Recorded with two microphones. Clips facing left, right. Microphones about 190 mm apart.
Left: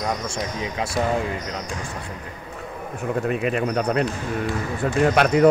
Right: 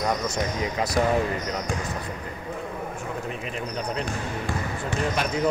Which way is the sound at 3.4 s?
65° left (ahead or behind).